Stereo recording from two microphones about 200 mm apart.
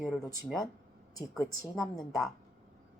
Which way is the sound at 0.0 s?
Centre (ahead or behind).